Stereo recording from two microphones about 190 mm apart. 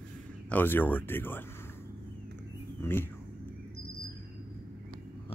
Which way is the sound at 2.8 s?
10° left (ahead or behind).